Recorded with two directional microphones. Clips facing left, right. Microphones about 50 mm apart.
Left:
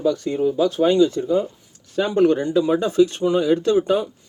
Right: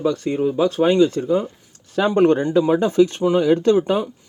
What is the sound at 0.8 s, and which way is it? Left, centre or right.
Speech, right.